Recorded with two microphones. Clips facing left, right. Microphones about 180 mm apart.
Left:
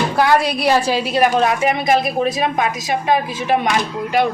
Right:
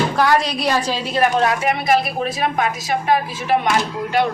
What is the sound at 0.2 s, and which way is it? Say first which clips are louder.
A woman's voice: left 4 dB; 10° left (ahead or behind).